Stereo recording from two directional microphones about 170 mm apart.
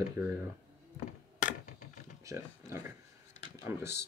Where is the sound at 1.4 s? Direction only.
50° left (ahead or behind).